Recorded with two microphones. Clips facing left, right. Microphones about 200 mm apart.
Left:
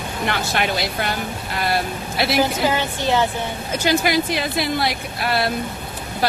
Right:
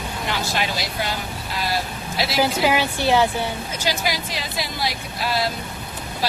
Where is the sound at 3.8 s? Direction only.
55° left (ahead or behind).